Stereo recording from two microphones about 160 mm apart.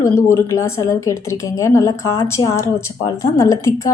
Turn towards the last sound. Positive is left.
turn(degrees=20)  # may be behind; listen again after turning